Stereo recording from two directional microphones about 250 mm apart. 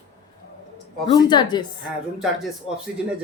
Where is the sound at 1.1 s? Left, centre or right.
Centre.